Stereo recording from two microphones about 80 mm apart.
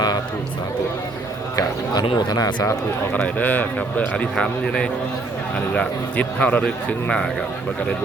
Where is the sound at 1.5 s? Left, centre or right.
Left.